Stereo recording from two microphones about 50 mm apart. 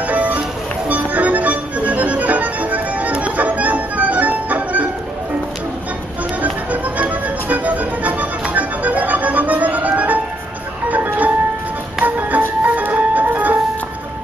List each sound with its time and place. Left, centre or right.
0.0 s music: right
6.4 s music: right